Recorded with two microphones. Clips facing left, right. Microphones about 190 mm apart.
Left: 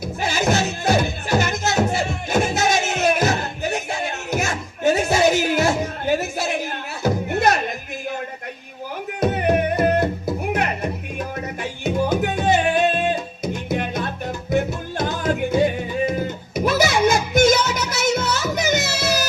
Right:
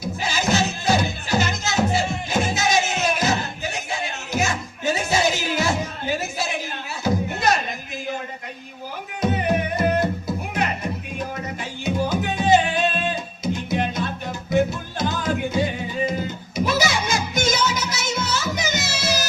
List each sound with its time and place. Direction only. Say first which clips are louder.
0.2 s music: left 2 dB; 55° left (ahead or behind)
9.2 s music: left 3 dB; 55° left (ahead or behind)
12.0 s music: left 2 dB; 55° left (ahead or behind)